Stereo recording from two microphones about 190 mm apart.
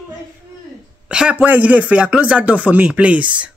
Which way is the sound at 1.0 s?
5° right (ahead or behind).